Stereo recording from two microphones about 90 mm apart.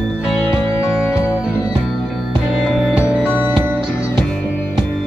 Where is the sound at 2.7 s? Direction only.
Centre (ahead or behind).